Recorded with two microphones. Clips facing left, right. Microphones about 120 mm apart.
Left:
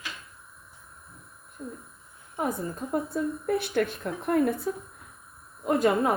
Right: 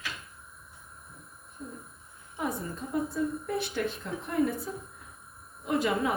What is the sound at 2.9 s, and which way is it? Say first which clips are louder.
A woman's voice: left 1 dB; 55° left (ahead or behind).